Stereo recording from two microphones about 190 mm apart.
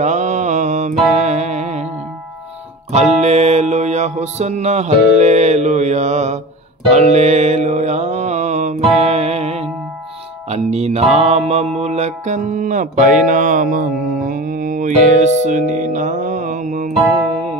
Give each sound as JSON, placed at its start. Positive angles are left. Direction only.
{"t": 0.0, "sound": "music", "side_deg": -40}
{"t": 2.9, "sound": "music", "side_deg": -35}